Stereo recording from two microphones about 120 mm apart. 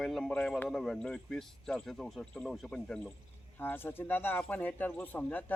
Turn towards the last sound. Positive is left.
turn(degrees=15)  # may be behind; listen again after turning